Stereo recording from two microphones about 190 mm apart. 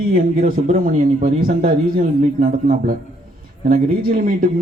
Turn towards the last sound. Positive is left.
turn(degrees=-50)  # may be behind; listen again after turning